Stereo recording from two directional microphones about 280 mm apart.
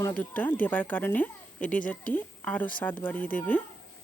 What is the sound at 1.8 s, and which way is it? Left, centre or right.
Speech, left.